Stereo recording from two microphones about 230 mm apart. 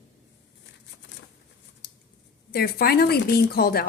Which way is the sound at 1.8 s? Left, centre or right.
Left.